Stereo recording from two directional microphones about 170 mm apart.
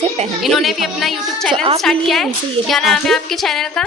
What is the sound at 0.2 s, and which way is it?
Speech, 40° right (ahead or behind).